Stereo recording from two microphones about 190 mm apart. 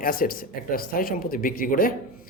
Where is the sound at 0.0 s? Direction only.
50° left (ahead or behind).